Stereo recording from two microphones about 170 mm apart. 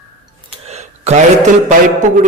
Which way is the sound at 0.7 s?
40° right (ahead or behind).